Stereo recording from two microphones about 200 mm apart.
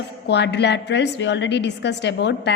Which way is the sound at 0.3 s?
60° left (ahead or behind).